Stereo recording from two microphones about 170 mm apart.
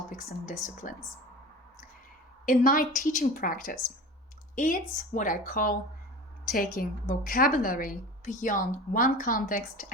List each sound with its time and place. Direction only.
0.1 s a woman's voice: 50° left (ahead or behind)
2.5 s a woman's voice: 55° left (ahead or behind)